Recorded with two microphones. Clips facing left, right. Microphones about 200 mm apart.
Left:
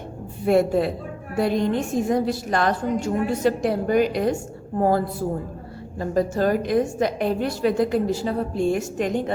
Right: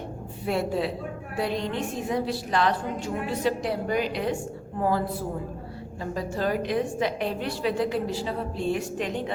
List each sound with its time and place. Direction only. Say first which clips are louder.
0.4 s a woman's voice: left 8 dB; 50° left (ahead or behind)